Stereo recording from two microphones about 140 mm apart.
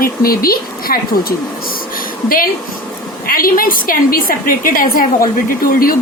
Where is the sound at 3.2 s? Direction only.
90° left.